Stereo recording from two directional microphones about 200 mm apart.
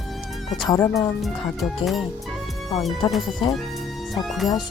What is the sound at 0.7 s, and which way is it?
Speech, 15° left (ahead or behind).